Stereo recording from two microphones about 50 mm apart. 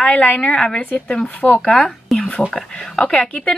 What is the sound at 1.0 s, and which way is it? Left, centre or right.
Speech, left.